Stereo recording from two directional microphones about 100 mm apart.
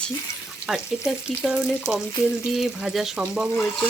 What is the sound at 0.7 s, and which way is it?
Speech, 5° right (ahead or behind).